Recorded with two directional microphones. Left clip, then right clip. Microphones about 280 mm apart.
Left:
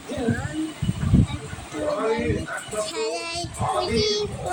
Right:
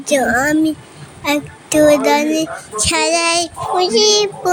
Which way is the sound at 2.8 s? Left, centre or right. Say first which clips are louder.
Right 15 dB; right.